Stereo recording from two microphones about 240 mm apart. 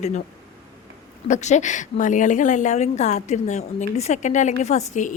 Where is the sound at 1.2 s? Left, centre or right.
Left.